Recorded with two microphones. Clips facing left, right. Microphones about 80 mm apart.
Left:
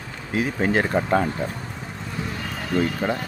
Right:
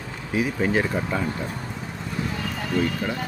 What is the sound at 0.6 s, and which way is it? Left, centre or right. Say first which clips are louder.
Speech: left 4 dB; left.